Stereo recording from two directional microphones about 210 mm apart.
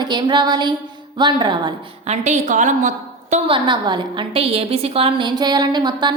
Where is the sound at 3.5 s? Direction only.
25° right (ahead or behind).